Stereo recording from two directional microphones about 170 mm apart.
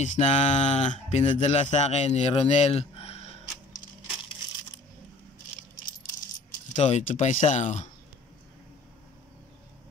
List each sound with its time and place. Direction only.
0.0 s speech: 45° left (ahead or behind)
6.7 s speech: 45° left (ahead or behind)